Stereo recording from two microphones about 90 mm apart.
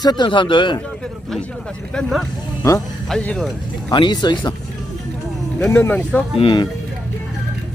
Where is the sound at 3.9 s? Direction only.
60° left (ahead or behind).